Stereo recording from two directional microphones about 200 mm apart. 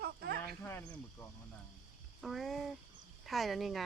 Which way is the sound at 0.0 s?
50° right (ahead or behind).